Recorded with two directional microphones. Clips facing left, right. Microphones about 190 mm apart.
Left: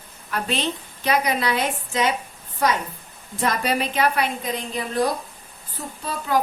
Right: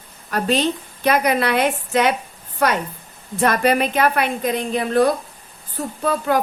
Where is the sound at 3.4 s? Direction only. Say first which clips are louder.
Right 6 dB; 60° right (ahead or behind).